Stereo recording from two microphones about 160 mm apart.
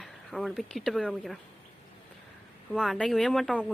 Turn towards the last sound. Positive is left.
turn(degrees=5)  # may be behind; listen again after turning